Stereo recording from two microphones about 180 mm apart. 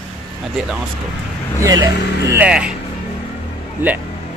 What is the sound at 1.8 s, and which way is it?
Speech, 15° right (ahead or behind).